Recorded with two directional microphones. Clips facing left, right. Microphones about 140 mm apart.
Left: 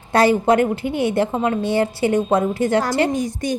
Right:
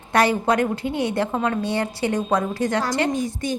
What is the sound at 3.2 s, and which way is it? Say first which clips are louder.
Speech: left 3 dB; 45° left (ahead or behind).